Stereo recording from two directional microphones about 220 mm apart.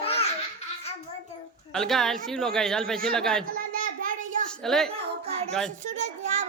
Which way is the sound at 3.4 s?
40° right (ahead or behind).